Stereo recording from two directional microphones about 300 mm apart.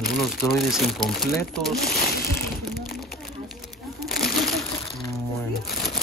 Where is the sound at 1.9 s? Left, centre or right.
Left.